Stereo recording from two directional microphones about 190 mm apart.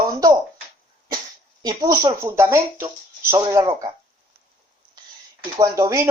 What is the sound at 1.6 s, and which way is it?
Speech, 20° right (ahead or behind).